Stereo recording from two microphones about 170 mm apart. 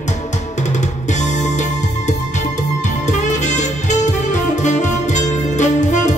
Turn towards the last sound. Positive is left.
turn(degrees=45)  # may be behind; listen again after turning